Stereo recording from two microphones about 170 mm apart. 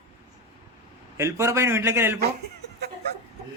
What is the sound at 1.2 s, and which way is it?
A man's voice, 15° right (ahead or behind).